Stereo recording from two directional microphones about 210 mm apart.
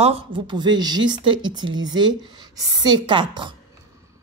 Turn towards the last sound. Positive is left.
turn(degrees=-20)  # may be behind; listen again after turning